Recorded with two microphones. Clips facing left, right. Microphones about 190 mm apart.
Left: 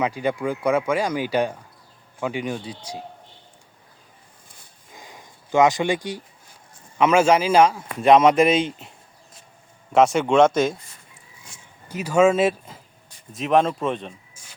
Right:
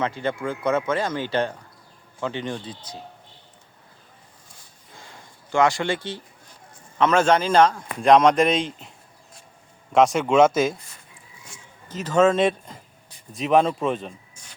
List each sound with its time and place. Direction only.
0.0 s speech: 10° left (ahead or behind)
4.9 s a sound: 15° left (ahead or behind)
7.0 s speech: 10° left (ahead or behind)
9.9 s speech: centre (ahead or behind)
11.9 s speech: 10° left (ahead or behind)